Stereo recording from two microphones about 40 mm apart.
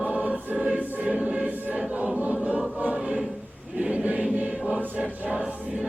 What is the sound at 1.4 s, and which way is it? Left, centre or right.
Choir, right.